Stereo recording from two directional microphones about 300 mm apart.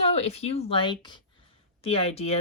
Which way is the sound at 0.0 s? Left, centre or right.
Centre.